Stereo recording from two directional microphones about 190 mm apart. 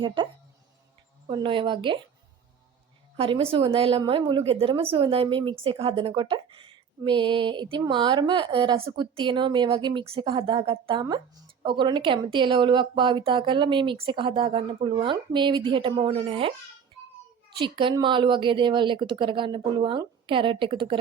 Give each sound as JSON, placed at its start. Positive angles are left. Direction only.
{"t": 0.0, "sound": "speech", "side_deg": -25}
{"t": 1.3, "sound": "speech", "side_deg": -25}
{"t": 3.2, "sound": "speech", "side_deg": -30}
{"t": 17.6, "sound": "speech", "side_deg": -25}